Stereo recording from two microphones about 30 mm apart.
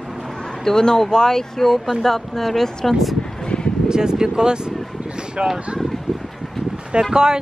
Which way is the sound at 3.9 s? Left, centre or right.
Right.